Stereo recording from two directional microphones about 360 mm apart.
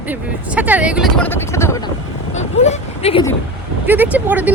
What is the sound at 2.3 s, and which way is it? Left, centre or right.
Speech, centre.